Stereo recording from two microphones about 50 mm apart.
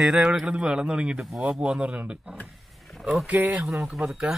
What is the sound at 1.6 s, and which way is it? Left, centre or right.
Speech, right.